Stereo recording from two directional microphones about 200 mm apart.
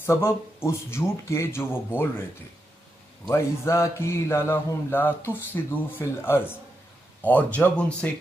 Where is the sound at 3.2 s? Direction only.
15° left (ahead or behind).